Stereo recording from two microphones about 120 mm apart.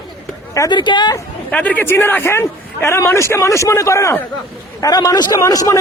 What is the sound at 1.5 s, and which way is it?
Speech, 10° left (ahead or behind).